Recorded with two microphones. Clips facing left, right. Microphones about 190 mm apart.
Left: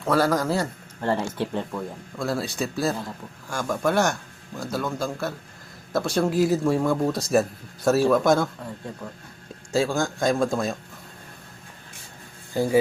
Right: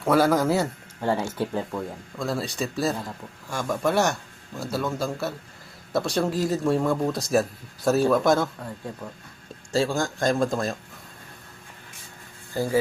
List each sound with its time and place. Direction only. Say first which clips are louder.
0.0 s speech: right 2 dB; 5° right (ahead or behind)
9.7 s speech: left 1 dB; centre (ahead or behind)
12.5 s speech: left 3 dB; 15° left (ahead or behind)